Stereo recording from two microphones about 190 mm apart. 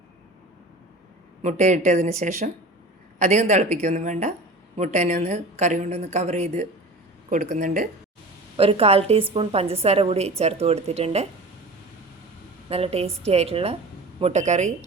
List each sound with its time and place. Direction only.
1.4 s a woman's voice: 40° right (ahead or behind)
8.5 s a woman's voice: 30° right (ahead or behind)
12.6 s a woman's voice: 30° right (ahead or behind)